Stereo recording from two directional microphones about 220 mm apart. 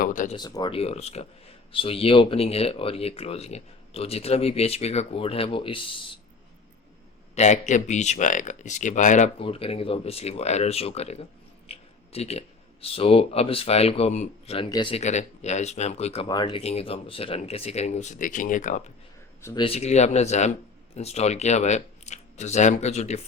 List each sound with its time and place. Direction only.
0.0 s a sound: 35° left (ahead or behind)
0.3 s speech: 20° left (ahead or behind)
7.3 s speech: 30° left (ahead or behind)
19.4 s speech: 15° left (ahead or behind)
19.6 s speech: 30° left (ahead or behind)